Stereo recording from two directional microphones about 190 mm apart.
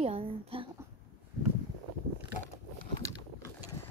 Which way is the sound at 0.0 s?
30° right (ahead or behind).